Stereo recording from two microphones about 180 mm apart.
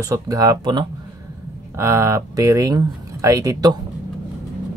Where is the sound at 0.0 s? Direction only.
20° right (ahead or behind).